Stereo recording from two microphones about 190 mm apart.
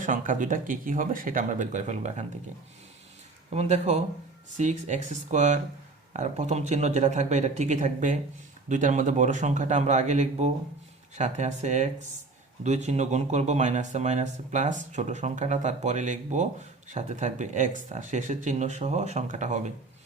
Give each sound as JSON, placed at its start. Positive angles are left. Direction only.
{"t": 0.0, "sound": "speech", "side_deg": -45}
{"t": 3.5, "sound": "speech", "side_deg": -35}